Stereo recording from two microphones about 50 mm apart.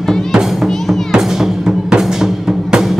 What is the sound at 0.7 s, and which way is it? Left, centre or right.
Music, centre.